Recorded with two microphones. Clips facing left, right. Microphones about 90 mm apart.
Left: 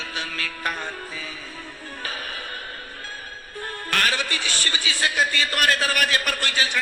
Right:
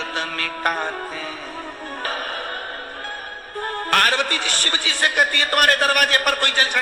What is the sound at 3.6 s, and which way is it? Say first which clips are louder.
A man's voice: right 6 dB; 45° right (ahead or behind).